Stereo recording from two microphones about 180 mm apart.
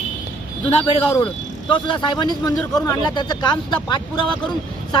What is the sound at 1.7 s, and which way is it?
Speech, 25° left (ahead or behind).